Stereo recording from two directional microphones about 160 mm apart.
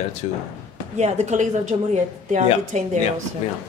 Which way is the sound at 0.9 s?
45° right (ahead or behind).